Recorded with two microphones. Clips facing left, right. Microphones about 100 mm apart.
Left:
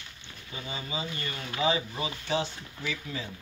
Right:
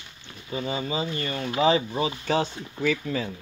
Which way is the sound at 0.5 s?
35° right (ahead or behind).